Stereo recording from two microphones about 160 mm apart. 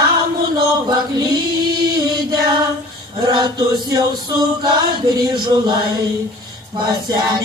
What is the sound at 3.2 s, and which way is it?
Music, 25° right (ahead or behind).